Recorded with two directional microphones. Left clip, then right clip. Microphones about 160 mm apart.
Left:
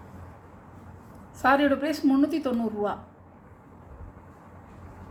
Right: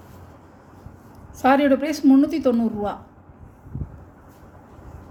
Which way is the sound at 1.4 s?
50° right (ahead or behind).